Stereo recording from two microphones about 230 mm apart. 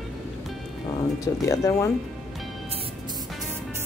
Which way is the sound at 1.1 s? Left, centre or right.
Centre.